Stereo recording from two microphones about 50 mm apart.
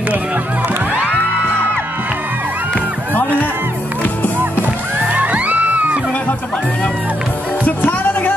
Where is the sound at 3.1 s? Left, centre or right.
Left.